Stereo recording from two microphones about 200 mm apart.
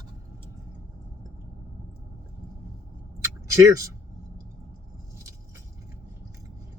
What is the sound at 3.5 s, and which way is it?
Speech, 15° right (ahead or behind).